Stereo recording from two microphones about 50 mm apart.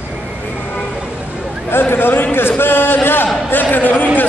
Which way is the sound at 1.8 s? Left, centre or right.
Left.